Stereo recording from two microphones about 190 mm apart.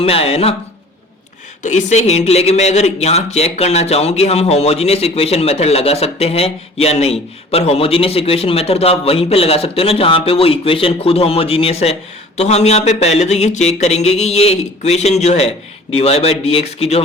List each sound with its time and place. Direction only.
0.0 s speech: 30° left (ahead or behind)
1.6 s speech: 40° left (ahead or behind)